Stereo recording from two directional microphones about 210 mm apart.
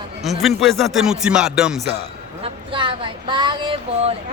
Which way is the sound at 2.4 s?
25° right (ahead or behind).